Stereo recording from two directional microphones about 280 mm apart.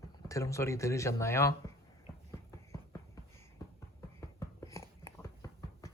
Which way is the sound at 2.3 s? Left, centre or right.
Centre.